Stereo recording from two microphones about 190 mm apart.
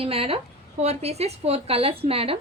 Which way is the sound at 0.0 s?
30° right (ahead or behind).